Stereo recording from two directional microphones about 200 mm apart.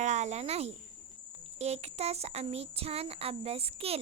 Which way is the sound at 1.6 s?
30° right (ahead or behind).